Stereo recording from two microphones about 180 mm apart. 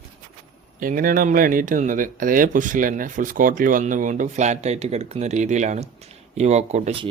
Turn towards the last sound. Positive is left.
turn(degrees=-40)  # may be behind; listen again after turning